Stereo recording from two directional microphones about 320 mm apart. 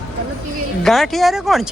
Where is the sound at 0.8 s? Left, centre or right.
Centre.